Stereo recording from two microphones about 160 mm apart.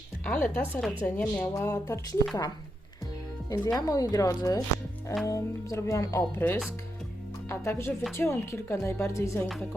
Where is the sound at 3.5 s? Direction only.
25° left (ahead or behind).